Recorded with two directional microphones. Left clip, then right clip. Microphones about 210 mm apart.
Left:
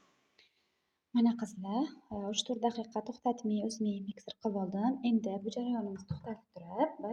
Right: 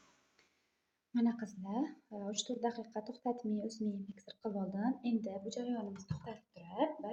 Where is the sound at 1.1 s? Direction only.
35° left (ahead or behind).